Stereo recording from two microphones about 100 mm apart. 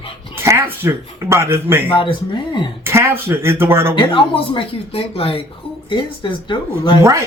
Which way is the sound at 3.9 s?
60° left (ahead or behind).